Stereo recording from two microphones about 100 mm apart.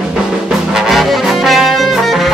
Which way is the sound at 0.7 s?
Centre (ahead or behind).